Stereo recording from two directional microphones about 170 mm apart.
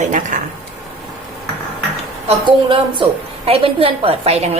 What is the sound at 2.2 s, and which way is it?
A woman's voice, 30° right (ahead or behind).